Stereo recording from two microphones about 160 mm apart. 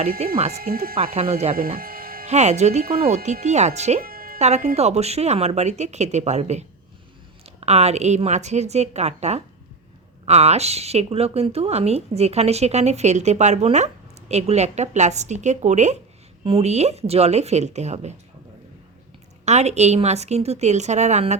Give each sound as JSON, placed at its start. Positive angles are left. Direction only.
{"t": 0.2, "sound": "speech", "side_deg": -40}
{"t": 0.5, "sound": "speech", "side_deg": -70}
{"t": 1.1, "sound": "speech", "side_deg": -40}
{"t": 1.5, "sound": "music", "side_deg": -65}
{"t": 2.2, "sound": "speech", "side_deg": -45}
{"t": 2.8, "sound": "speech", "side_deg": -70}
{"t": 3.4, "sound": "speech", "side_deg": -45}
{"t": 4.0, "sound": "music", "side_deg": -65}
{"t": 4.4, "sound": "speech", "side_deg": -45}
{"t": 16.4, "sound": "speech", "side_deg": -35}
{"t": 19.5, "sound": "speech", "side_deg": -45}